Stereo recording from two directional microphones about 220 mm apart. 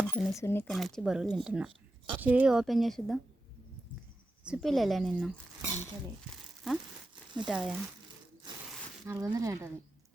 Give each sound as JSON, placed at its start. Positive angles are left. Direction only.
{"t": 0.1, "sound": "speech", "side_deg": 10}
{"t": 0.7, "sound": "speech", "side_deg": 0}
{"t": 4.4, "sound": "speech", "side_deg": 0}
{"t": 8.5, "sound": "a sound", "side_deg": -20}
{"t": 9.0, "sound": "speech", "side_deg": -15}